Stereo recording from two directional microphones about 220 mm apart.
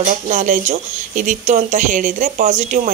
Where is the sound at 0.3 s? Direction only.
35° right (ahead or behind).